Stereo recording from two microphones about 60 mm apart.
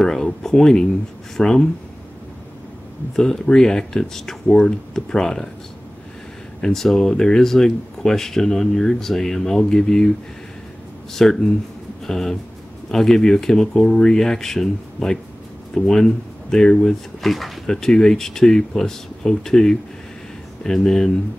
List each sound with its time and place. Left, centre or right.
0.0 s speech: centre
3.2 s speech: centre
6.6 s speech: centre
11.1 s speech: centre